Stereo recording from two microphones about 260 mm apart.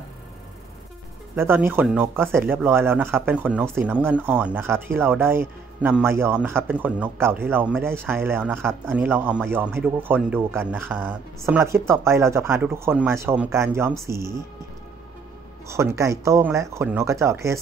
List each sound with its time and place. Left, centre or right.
1.3 s speech: centre
15.7 s speech: centre